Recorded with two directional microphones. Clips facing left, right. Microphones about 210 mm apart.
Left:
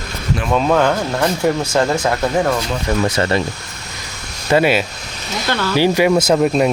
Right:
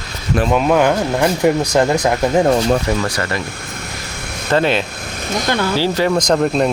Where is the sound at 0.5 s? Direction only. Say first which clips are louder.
Even; 10° right (ahead or behind).